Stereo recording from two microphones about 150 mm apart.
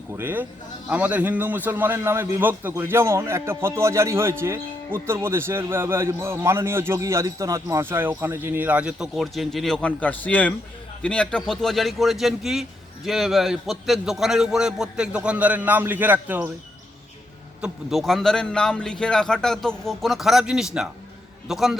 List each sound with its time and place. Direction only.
0.1 s a man's voice: 15° right (ahead or behind)
17.6 s a man's voice: centre (ahead or behind)